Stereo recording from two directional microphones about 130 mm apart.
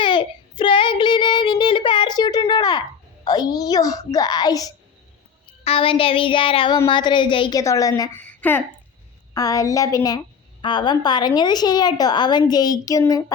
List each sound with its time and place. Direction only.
0.0 s child singing: 35° left (ahead or behind)
2.5 s a sound: 30° left (ahead or behind)
3.2 s a woman's voice: 30° left (ahead or behind)
5.6 s a woman's voice: 45° left (ahead or behind)
7.6 s a woman's voice: 25° left (ahead or behind)
8.2 s a sound: 10° left (ahead or behind)
9.3 s a woman's voice: 25° left (ahead or behind)